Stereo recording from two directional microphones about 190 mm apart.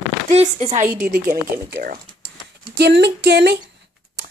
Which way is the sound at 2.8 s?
65° right (ahead or behind).